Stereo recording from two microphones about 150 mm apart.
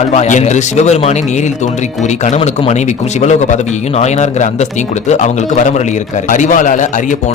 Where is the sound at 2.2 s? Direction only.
50° left (ahead or behind).